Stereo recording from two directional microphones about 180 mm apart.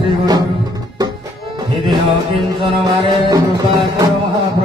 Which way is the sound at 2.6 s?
25° right (ahead or behind).